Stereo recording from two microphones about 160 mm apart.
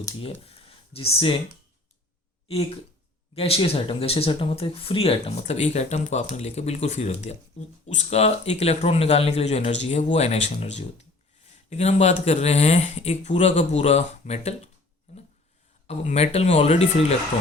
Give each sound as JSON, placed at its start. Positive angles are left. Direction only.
{"t": 0.4, "sound": "a sound", "side_deg": 35}
{"t": 2.5, "sound": "speech", "side_deg": 35}
{"t": 15.9, "sound": "speech", "side_deg": 40}